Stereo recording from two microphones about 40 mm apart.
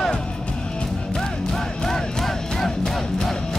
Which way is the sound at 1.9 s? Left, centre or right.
Centre.